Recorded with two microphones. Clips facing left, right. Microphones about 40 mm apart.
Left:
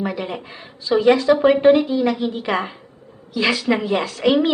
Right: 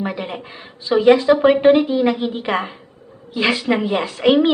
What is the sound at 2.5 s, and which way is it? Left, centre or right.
Speech, centre.